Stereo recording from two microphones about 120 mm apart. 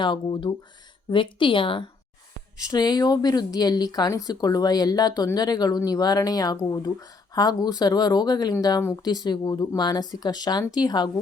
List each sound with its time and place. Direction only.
0.0 s a woman's voice: 40° left (ahead or behind)
2.6 s speech: 35° left (ahead or behind)